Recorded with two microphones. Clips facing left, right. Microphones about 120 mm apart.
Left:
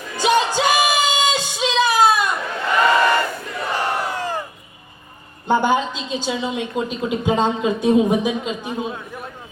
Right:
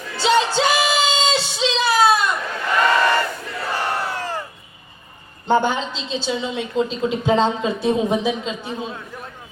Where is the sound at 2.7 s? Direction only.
20° left (ahead or behind).